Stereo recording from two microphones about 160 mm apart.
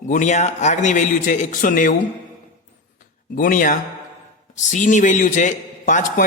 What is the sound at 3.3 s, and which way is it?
A man's voice, 60° left (ahead or behind).